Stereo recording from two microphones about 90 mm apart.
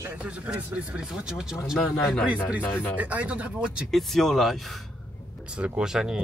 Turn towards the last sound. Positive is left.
turn(degrees=-5)  # may be behind; listen again after turning